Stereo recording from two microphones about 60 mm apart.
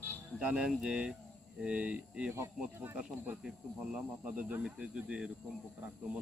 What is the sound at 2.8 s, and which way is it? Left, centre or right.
Speech, right.